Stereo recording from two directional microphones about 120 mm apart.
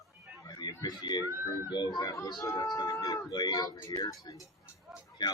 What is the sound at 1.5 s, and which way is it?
Speech, 35° left (ahead or behind).